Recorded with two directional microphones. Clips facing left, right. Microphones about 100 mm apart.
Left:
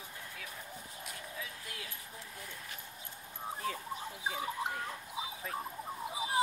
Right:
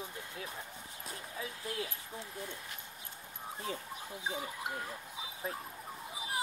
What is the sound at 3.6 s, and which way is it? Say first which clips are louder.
Speech: left 1 dB; 25° right (ahead or behind).